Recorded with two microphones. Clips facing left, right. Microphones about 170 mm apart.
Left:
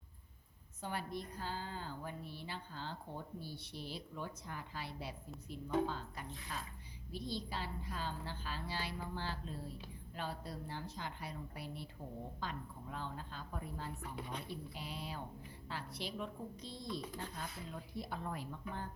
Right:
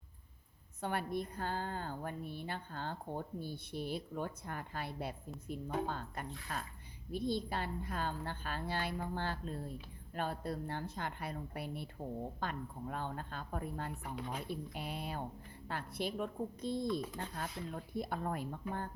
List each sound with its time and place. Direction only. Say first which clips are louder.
0.8 s a woman's voice: right 5 dB; 60° right (ahead or behind)